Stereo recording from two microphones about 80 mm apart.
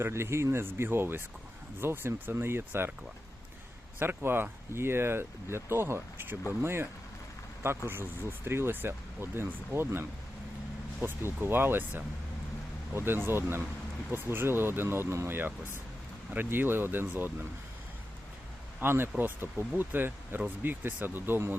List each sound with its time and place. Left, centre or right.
0.0 s speech: right
4.0 s speech: right
7.9 s speech: right
18.8 s speech: right